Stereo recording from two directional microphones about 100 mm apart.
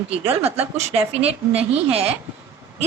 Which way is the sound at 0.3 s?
20° right (ahead or behind).